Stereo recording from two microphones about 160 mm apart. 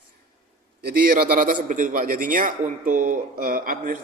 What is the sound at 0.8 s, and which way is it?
Speech, 60° right (ahead or behind).